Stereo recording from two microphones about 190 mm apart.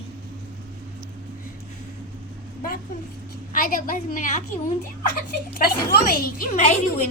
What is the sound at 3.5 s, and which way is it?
Speech, 45° left (ahead or behind).